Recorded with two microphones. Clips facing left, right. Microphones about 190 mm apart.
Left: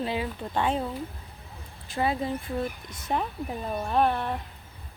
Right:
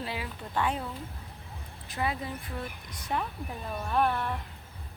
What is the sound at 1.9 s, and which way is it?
Speech, 30° left (ahead or behind).